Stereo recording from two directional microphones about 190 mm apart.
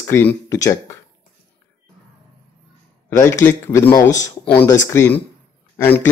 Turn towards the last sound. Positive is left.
turn(degrees=10)  # may be behind; listen again after turning